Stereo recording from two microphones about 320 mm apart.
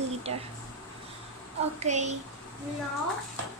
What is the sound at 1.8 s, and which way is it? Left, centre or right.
Speech, right.